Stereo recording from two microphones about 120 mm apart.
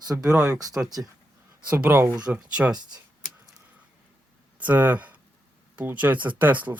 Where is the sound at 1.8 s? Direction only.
20° right (ahead or behind).